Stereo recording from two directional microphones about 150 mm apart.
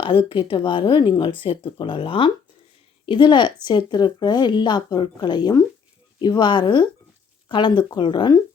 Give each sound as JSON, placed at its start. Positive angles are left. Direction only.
{"t": 0.0, "sound": "speech", "side_deg": 35}